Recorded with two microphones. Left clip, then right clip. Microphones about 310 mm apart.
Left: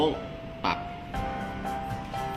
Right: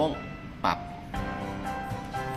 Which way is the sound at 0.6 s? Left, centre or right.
Right.